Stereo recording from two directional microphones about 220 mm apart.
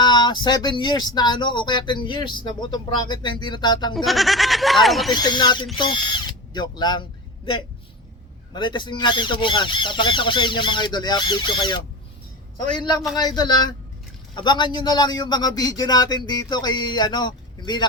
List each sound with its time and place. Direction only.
0.0 s speech: 20° left (ahead or behind)
3.9 s speech: centre (ahead or behind)
5.1 s speech: 20° left (ahead or behind)
8.5 s speech: 20° left (ahead or behind)